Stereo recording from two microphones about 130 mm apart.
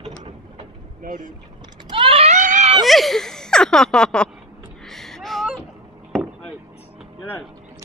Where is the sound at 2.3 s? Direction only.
70° right (ahead or behind).